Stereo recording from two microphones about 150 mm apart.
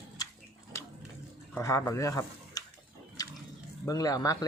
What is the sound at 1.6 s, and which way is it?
Speech, 20° left (ahead or behind).